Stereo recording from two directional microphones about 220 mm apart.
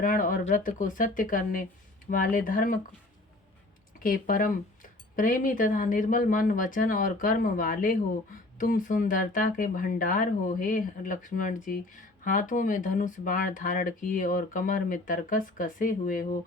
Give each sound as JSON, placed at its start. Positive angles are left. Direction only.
{"t": 0.0, "sound": "speech", "side_deg": 35}
{"t": 4.0, "sound": "speech", "side_deg": 40}